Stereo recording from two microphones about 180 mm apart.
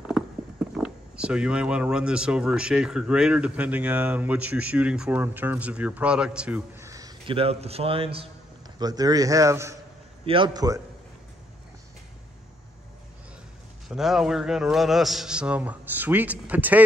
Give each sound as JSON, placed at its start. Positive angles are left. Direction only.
{"t": 0.8, "sound": "a man's voice", "side_deg": -5}
{"t": 10.2, "sound": "a man's voice", "side_deg": -30}
{"t": 13.8, "sound": "a man's voice", "side_deg": 0}